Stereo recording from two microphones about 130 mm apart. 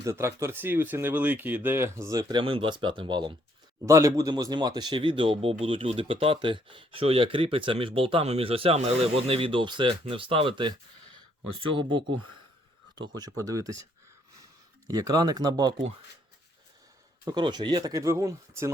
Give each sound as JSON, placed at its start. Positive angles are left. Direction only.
{"t": 0.0, "sound": "speech", "side_deg": -20}
{"t": 2.4, "sound": "speech", "side_deg": -40}
{"t": 3.8, "sound": "speech", "side_deg": -25}
{"t": 14.8, "sound": "speech", "side_deg": -30}
{"t": 17.2, "sound": "speech", "side_deg": -35}